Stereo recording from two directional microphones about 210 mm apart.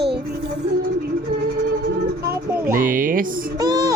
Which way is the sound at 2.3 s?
10° right (ahead or behind).